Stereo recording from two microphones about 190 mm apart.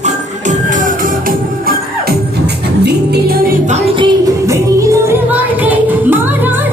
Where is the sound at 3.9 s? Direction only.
20° right (ahead or behind).